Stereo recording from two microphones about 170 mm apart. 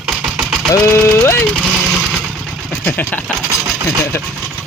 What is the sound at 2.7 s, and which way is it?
Speech, 10° left (ahead or behind).